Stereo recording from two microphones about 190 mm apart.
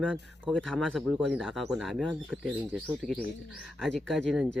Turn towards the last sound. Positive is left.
turn(degrees=0)  # may be behind; listen again after turning